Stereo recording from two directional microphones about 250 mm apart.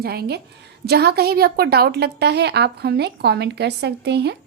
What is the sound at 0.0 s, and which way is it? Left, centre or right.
A woman's voice, right.